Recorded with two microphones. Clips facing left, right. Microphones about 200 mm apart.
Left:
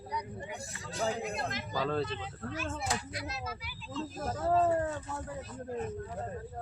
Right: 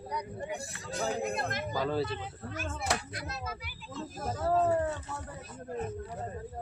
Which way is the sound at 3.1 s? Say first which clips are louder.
Even; 50° right (ahead or behind).